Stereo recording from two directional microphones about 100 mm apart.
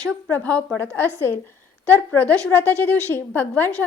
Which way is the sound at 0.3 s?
15° left (ahead or behind).